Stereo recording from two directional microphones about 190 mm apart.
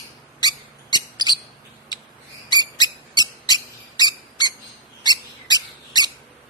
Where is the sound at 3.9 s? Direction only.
20° left (ahead or behind).